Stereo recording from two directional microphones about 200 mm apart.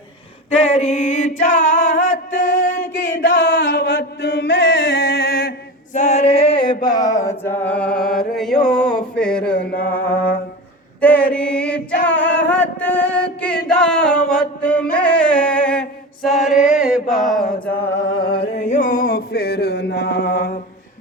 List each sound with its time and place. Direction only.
0.8 s music: 40° left (ahead or behind)
3.2 s chant: 60° left (ahead or behind); by 6.7 s 25° left (ahead or behind)
6.8 s mantra: 20° left (ahead or behind)
8.4 s a sound: centre (ahead or behind)
9.6 s mantra: 45° left (ahead or behind)
11.0 s mantra: 5° left (ahead or behind)
11.3 s chant: 5° left (ahead or behind)
16.6 s mantra: 5° right (ahead or behind)
17.7 s music: 10° left (ahead or behind)
18.2 s a sound: 25° left (ahead or behind); by 20.6 s 55° left (ahead or behind)